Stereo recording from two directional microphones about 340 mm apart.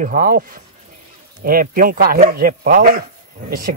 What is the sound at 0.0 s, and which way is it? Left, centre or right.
Speech, right.